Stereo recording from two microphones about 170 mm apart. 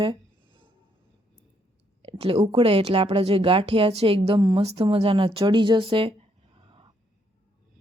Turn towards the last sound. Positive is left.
turn(degrees=-30)  # may be behind; listen again after turning